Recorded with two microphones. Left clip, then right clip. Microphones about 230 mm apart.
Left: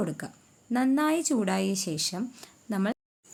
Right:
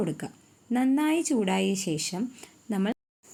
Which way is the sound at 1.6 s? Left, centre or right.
Left.